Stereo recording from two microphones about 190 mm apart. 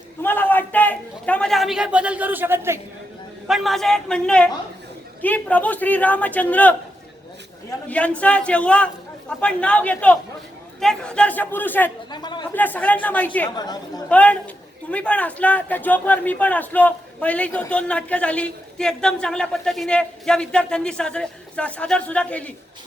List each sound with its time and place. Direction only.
0.2 s a man's voice: 10° left (ahead or behind); by 2.7 s 10° right (ahead or behind)
3.4 s a man's voice: centre (ahead or behind)
7.9 s speech: 5° left (ahead or behind)
12.1 s speech: 25° left (ahead or behind)
12.5 s speech: 10° left (ahead or behind)
13.6 s speech: 20° left (ahead or behind)
14.1 s speech: 5° left (ahead or behind)